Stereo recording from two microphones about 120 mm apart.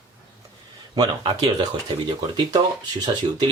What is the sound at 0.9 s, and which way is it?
Speech, 35° right (ahead or behind).